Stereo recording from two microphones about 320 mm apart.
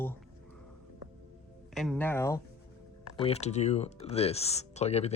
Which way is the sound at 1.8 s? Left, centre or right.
Centre.